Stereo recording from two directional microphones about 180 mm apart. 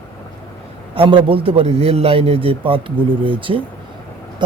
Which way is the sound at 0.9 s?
30° right (ahead or behind).